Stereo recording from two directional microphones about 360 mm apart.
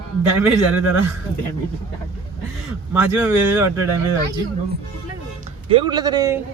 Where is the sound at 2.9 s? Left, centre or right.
Centre.